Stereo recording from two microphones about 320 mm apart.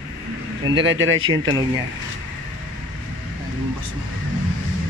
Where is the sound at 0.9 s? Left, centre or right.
Right.